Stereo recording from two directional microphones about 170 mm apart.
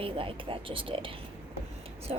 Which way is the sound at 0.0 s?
30° right (ahead or behind).